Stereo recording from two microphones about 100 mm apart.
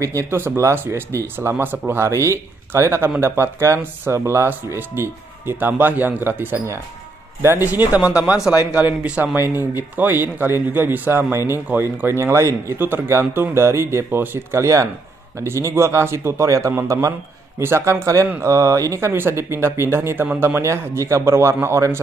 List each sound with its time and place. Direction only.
0.0 s speech: 25° right (ahead or behind)